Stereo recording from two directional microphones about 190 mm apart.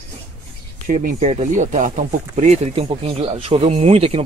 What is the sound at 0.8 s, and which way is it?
Speech, 40° right (ahead or behind).